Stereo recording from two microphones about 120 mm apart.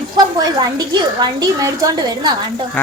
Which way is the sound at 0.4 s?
35° right (ahead or behind).